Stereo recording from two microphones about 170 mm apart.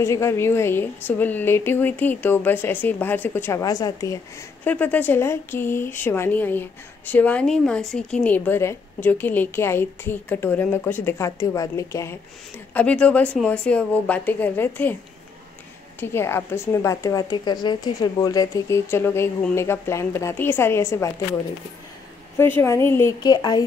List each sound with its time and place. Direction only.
0.0 s speech: 15° left (ahead or behind)
4.6 s a woman's voice: 10° left (ahead or behind)
12.7 s speech: 5° left (ahead or behind)
16.0 s speech: 15° left (ahead or behind)
22.4 s speech: 10° left (ahead or behind)